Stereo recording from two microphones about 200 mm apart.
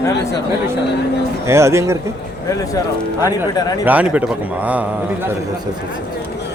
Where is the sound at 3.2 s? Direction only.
20° left (ahead or behind).